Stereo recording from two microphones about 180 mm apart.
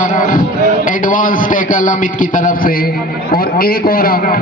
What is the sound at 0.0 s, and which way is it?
A man's voice, 45° left (ahead or behind).